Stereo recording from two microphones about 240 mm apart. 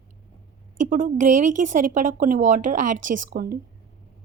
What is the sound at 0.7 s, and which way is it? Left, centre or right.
A woman's voice, right.